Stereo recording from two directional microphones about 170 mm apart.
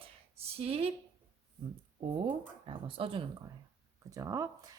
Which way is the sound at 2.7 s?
30° right (ahead or behind).